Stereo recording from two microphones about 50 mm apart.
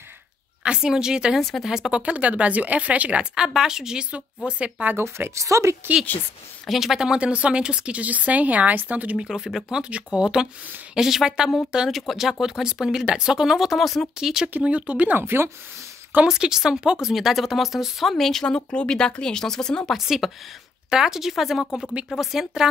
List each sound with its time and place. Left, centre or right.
0.7 s speech: centre
2.0 s speech: right
3.3 s speech: centre
4.9 s a woman's voice: right
6.7 s speech: centre
7.2 s speech: right
9.3 s speech: centre
11.0 s speech: centre
14.2 s speech: centre
14.6 s speech: right
15.0 s speech: right
16.3 s speech: centre
18.4 s speech: centre
19.9 s speech: centre